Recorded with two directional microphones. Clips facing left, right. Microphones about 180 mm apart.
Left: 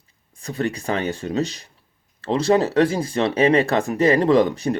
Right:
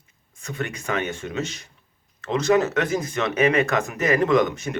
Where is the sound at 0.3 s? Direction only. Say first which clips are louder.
Left 6 dB; 35° left (ahead or behind).